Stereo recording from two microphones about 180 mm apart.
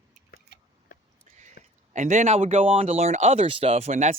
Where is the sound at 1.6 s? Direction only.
50° left (ahead or behind).